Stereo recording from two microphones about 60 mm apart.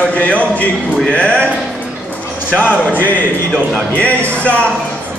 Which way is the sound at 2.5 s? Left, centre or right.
Left.